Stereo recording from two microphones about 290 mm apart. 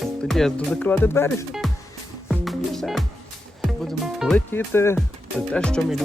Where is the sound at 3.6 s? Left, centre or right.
Centre.